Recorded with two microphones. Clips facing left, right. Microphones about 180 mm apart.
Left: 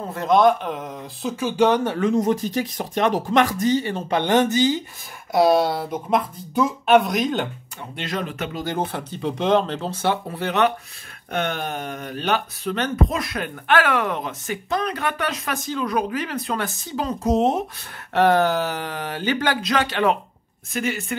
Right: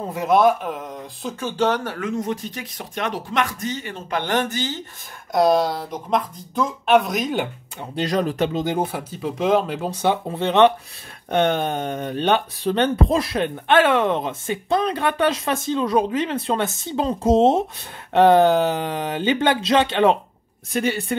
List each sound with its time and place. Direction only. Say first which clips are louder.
0.0 s speech: even; 10° right (ahead or behind); by 2.0 s 15° left (ahead or behind)
2.0 s speech: left 5 dB; 35° left (ahead or behind)
4.2 s speech: left 5 dB; 20° left (ahead or behind)
5.3 s speech: even; 5° left (ahead or behind)
7.9 s speech: right 7 dB; 35° right (ahead or behind)
8.5 s speech: right 3 dB; 15° right (ahead or behind); by 21.2 s 30° right (ahead or behind)